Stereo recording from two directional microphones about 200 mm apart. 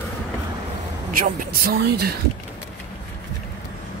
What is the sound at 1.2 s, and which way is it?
Speech, 45° right (ahead or behind).